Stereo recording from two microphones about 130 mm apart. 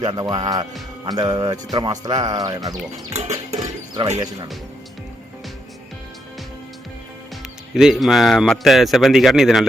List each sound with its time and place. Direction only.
0.0 s speech: 35° right (ahead or behind)
3.1 s music: 60° right (ahead or behind)
3.6 s music: 30° right (ahead or behind)
7.7 s speech: centre (ahead or behind)